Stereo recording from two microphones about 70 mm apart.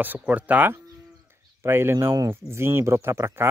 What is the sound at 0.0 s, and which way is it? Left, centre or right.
Speech, right.